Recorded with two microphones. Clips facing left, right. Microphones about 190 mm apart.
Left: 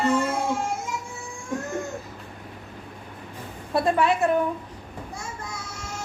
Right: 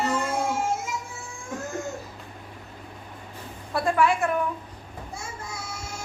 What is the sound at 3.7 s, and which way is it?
Speech, 20° left (ahead or behind).